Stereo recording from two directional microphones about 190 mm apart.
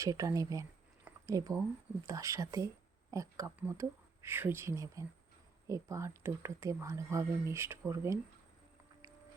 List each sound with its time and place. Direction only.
0.0 s speech: 15° right (ahead or behind)